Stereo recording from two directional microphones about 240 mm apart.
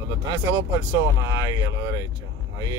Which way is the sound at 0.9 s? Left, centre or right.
Centre.